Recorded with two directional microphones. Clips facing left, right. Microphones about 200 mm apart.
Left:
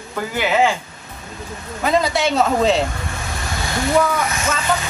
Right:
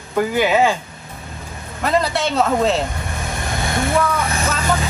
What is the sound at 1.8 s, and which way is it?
Speech, centre (ahead or behind).